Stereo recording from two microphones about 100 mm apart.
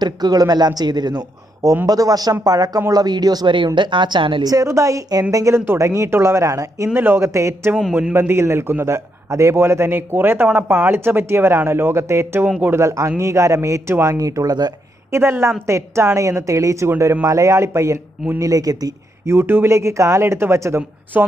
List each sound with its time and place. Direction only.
0.0 s speech: 45° right (ahead or behind)
4.5 s a man's voice: 35° right (ahead or behind)
7.7 s a man's voice: 10° right (ahead or behind)
8.1 s a man's voice: 25° right (ahead or behind)
12.4 s a man's voice: 15° right (ahead or behind)
12.7 s speech: 30° right (ahead or behind)
15.0 s a woman's voice: 25° right (ahead or behind)
19.3 s a man's voice: 25° right (ahead or behind)
21.1 s a man's voice: 15° right (ahead or behind)